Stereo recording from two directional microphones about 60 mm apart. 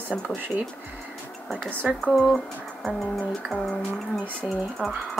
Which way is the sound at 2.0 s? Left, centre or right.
Centre.